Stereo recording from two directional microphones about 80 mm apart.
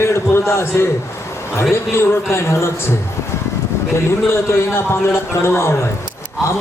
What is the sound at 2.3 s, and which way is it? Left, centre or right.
Speech, left.